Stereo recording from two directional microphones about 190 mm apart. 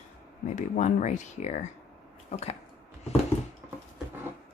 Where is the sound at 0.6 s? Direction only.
40° left (ahead or behind).